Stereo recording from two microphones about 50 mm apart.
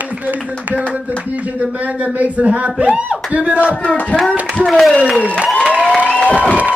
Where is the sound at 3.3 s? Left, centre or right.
Right.